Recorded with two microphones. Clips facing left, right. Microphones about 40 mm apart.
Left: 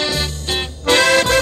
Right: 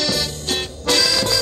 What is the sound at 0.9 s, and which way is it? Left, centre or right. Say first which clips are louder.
Music: left 6 dB; left.